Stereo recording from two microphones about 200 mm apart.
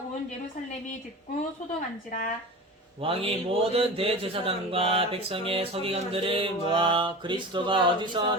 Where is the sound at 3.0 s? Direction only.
30° right (ahead or behind).